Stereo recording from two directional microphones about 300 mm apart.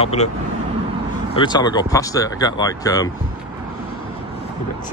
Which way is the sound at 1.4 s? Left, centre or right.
Centre.